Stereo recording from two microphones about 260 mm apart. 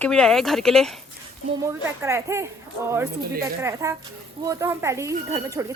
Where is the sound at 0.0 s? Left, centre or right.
Centre.